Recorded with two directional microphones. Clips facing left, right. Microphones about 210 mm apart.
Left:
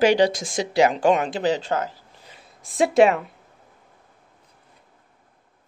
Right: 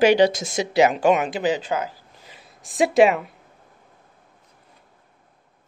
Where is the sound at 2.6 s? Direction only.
20° right (ahead or behind).